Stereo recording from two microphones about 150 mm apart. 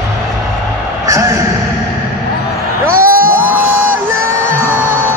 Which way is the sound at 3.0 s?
70° right (ahead or behind).